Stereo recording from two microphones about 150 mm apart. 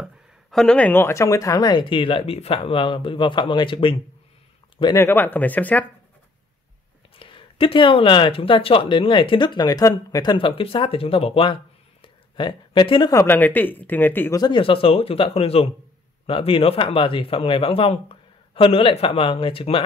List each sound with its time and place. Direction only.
0.0 s speech: centre (ahead or behind); by 3.9 s 35° left (ahead or behind)
4.9 s speech: 15° left (ahead or behind)
7.2 s speech: 35° left (ahead or behind)
10.3 s speech: 35° left (ahead or behind)
12.0 s a sound: 30° left (ahead or behind)
13.1 s speech: 15° left (ahead or behind)
14.4 s speech: 35° left (ahead or behind)